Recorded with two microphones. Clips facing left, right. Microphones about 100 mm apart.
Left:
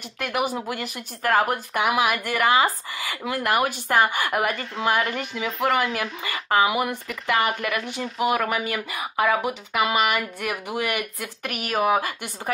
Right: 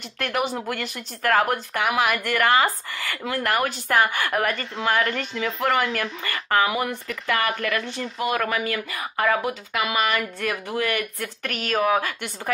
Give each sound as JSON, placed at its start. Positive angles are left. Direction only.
{"t": 0.2, "sound": "speech", "side_deg": 10}
{"t": 1.7, "sound": "speech", "side_deg": 20}